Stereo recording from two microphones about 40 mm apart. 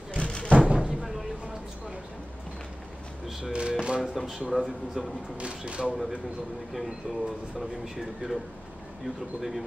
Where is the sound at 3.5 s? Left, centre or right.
Right.